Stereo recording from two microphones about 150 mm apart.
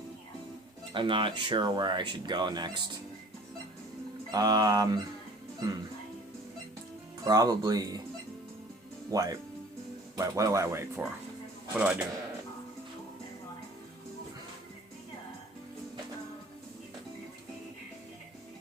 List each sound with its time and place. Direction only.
0.9 s speech: 35° right (ahead or behind)
4.3 s speech: 25° right (ahead or behind)
7.3 s speech: 25° right (ahead or behind)
9.0 s a man's voice: 25° right (ahead or behind)